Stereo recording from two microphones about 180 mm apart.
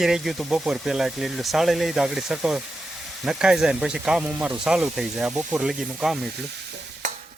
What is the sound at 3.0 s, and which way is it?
Speech, centre (ahead or behind).